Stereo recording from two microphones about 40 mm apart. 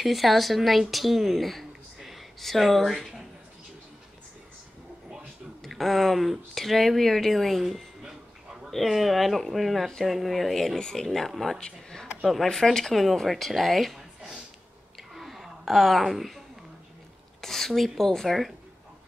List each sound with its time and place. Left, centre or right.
0.0 s a woman's voice: centre
5.6 s speech: centre
10.8 s speech: centre
11.1 s speech: centre
11.6 s a sound: centre
12.5 s speech: centre
15.1 s a sound: centre
17.4 s speech: centre